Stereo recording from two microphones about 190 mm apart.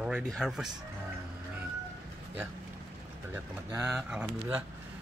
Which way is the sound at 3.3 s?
15° right (ahead or behind).